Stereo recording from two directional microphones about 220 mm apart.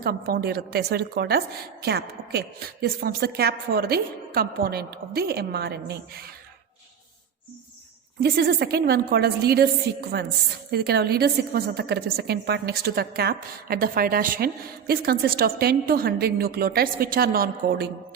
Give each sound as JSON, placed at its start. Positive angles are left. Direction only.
{"t": 0.0, "sound": "a woman's voice", "side_deg": -45}
{"t": 8.2, "sound": "a woman's voice", "side_deg": -45}